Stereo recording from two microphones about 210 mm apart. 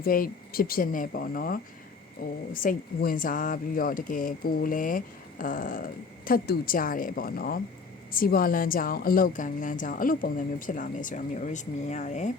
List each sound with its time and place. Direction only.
0.0 s speech: 45° left (ahead or behind)